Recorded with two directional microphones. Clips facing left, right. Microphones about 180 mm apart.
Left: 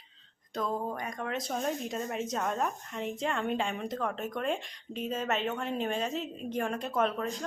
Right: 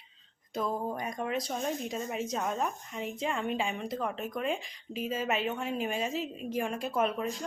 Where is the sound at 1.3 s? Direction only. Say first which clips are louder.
Left 1 dB; centre (ahead or behind).